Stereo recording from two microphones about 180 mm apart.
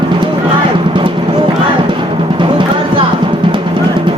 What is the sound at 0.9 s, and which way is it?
Music, 30° right (ahead or behind).